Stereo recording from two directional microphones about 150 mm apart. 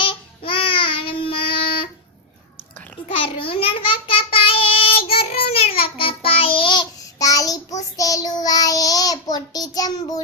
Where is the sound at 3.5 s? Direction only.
35° left (ahead or behind).